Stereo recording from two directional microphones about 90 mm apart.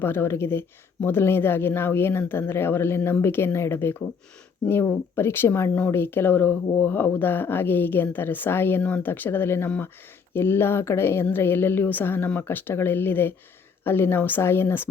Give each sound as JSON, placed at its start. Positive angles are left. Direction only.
{"t": 0.0, "sound": "a woman's voice", "side_deg": 25}